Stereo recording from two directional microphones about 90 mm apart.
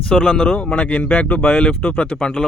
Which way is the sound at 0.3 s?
10° left (ahead or behind).